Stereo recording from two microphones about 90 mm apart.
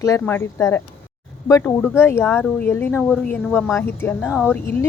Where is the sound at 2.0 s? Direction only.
25° left (ahead or behind).